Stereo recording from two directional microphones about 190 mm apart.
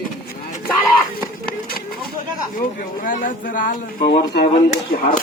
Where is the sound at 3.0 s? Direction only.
45° left (ahead or behind); by 4.5 s 60° left (ahead or behind).